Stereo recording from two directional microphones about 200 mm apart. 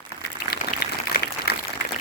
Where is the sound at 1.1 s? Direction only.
50° left (ahead or behind).